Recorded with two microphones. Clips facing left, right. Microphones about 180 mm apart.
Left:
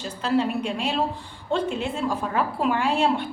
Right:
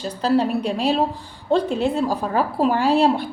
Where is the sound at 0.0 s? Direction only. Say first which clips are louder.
Right 4 dB; 35° right (ahead or behind).